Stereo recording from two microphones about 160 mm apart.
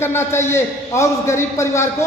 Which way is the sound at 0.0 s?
15° left (ahead or behind).